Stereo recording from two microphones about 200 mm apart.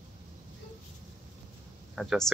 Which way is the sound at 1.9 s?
Centre (ahead or behind).